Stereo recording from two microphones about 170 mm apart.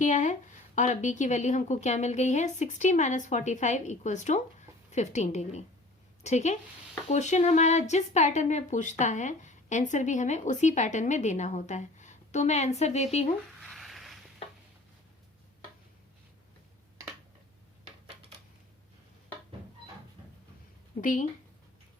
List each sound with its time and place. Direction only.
0.0 s speech: 45° left (ahead or behind)
13.6 s a sound: centre (ahead or behind)
21.0 s speech: 50° left (ahead or behind)